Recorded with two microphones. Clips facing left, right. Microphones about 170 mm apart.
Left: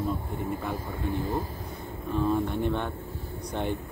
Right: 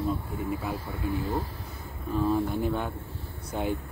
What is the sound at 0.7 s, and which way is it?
Speech, 45° left (ahead or behind).